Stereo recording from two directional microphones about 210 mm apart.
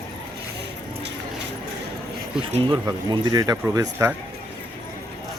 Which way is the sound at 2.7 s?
20° right (ahead or behind).